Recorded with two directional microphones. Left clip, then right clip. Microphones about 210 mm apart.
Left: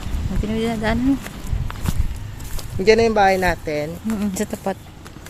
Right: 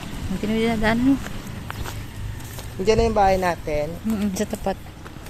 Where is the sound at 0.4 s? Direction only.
Centre (ahead or behind).